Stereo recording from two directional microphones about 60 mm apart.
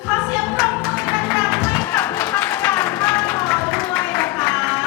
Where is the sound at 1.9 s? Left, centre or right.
Left.